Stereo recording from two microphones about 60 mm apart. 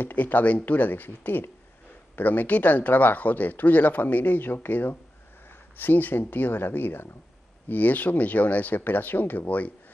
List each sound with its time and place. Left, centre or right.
0.0 s speech: left